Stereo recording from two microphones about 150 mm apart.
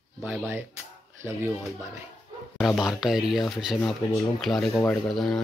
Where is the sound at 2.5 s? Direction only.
Centre (ahead or behind).